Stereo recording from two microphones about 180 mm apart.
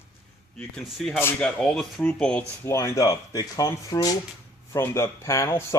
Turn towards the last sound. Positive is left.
turn(degrees=15)  # may be behind; listen again after turning